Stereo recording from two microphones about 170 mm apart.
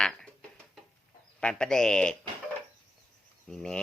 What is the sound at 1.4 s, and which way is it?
Speech, 5° left (ahead or behind).